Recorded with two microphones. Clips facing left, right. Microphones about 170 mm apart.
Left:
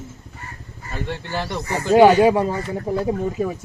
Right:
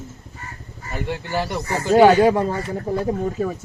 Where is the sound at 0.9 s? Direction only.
10° right (ahead or behind).